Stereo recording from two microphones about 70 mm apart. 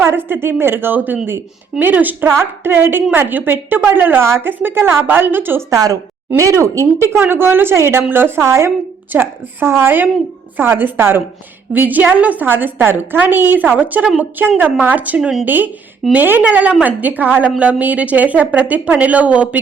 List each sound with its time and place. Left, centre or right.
0.0 s a woman's voice: right
5.7 s a woman's voice: right; by 19.5 s centre